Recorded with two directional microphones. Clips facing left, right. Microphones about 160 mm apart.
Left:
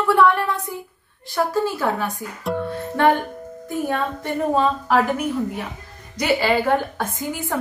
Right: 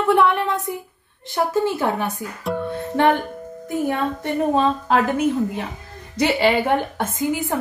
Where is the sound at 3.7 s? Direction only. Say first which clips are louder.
Right 2 dB; 20° right (ahead or behind).